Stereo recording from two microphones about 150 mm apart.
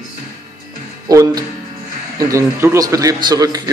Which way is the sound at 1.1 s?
25° right (ahead or behind).